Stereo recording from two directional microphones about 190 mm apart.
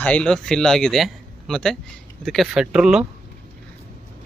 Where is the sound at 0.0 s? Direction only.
5° left (ahead or behind).